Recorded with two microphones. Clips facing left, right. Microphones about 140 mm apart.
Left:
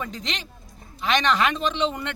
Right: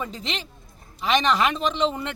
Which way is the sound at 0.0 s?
5° right (ahead or behind).